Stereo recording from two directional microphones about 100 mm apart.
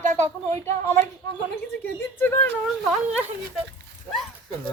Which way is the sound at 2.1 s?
20° left (ahead or behind).